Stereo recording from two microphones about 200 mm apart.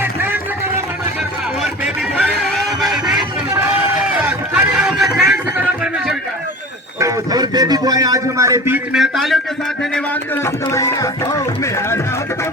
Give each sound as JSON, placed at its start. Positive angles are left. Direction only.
{"t": 0.0, "sound": "a sound", "side_deg": -10}
{"t": 1.8, "sound": "a sound", "side_deg": -5}
{"t": 2.3, "sound": "music", "side_deg": 0}
{"t": 4.0, "sound": "run", "side_deg": -5}
{"t": 7.0, "sound": "a man's voice", "side_deg": -20}
{"t": 10.4, "sound": "speech", "side_deg": 15}